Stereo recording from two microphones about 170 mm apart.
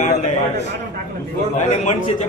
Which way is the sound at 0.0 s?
45° left (ahead or behind).